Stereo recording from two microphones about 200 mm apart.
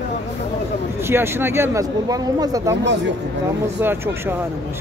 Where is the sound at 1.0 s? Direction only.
10° right (ahead or behind).